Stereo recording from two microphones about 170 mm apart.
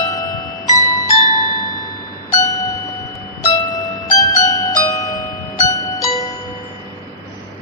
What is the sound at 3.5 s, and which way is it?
Music, 20° left (ahead or behind).